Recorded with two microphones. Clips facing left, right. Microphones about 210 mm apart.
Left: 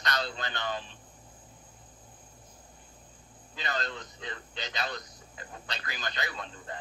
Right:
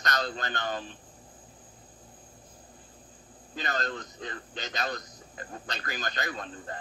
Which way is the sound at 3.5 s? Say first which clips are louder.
Right 3 dB; 45° right (ahead or behind).